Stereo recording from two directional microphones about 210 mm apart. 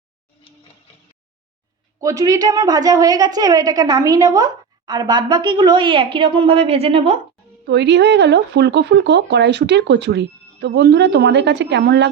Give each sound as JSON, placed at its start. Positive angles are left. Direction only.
{"t": 2.0, "sound": "a woman's voice", "side_deg": -15}
{"t": 7.6, "sound": "speech", "side_deg": -55}